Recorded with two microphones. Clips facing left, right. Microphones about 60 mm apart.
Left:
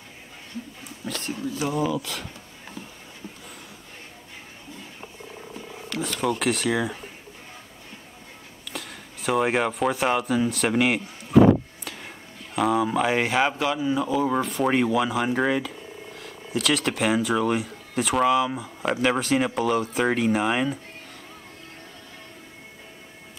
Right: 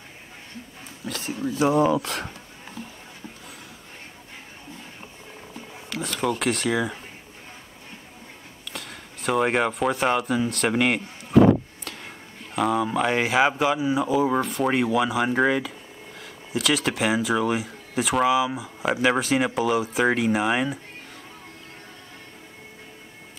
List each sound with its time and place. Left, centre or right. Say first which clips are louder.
1.0 s a sound: even; centre
1.4 s speech: right 6 dB; right
5.5 s speech: even; centre
8.6 s speech: left 1 dB; centre
11.8 s a sound: even; centre
12.5 s speech: left 1 dB; centre